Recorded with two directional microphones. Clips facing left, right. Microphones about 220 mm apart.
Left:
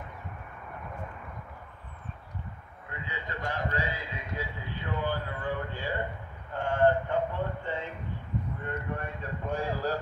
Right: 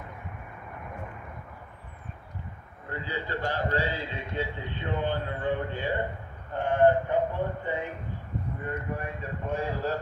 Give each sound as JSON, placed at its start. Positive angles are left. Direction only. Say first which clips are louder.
{"t": 2.9, "sound": "a man's voice", "louder": "right 6 dB", "side_deg": -35}
{"t": 9.0, "sound": "speech", "louder": "right 1 dB", "side_deg": -5}